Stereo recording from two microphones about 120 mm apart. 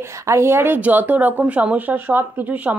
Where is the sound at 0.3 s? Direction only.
20° right (ahead or behind).